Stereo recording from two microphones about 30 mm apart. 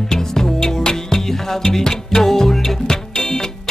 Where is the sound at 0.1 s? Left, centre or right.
Centre.